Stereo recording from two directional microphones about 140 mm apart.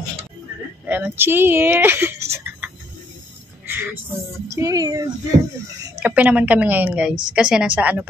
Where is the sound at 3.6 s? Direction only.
15° right (ahead or behind).